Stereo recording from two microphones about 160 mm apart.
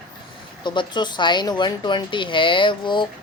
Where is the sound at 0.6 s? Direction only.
30° left (ahead or behind).